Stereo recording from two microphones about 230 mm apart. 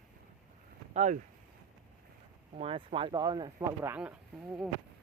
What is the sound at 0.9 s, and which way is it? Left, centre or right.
Speech, right.